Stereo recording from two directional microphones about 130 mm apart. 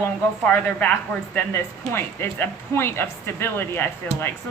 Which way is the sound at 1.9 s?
20° left (ahead or behind).